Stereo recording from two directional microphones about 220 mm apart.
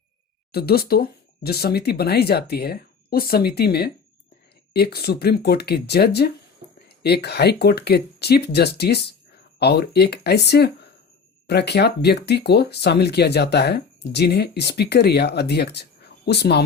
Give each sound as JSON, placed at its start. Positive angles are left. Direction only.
{"t": 0.5, "sound": "speech", "side_deg": 45}